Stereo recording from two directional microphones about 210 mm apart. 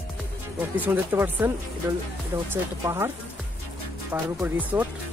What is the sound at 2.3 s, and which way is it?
Speech, 25° right (ahead or behind).